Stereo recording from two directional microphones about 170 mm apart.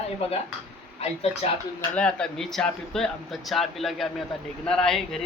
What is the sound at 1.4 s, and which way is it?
Speech, 35° left (ahead or behind).